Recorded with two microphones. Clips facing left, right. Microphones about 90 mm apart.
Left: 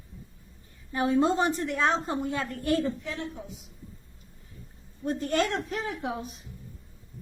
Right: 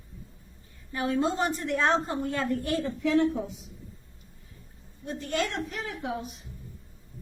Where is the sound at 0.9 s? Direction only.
25° left (ahead or behind).